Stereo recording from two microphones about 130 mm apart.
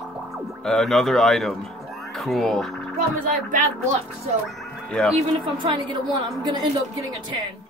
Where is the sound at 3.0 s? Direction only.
85° right.